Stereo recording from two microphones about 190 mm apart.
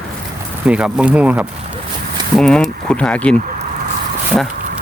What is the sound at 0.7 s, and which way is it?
Speech, 5° right (ahead or behind).